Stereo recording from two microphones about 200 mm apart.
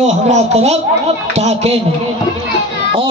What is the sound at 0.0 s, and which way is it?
A woman's voice, 35° right (ahead or behind).